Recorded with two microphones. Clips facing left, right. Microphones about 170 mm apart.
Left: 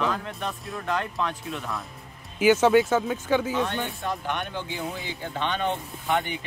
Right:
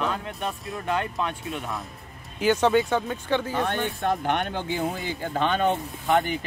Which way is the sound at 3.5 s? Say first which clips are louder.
Right 1 dB; 55° right (ahead or behind).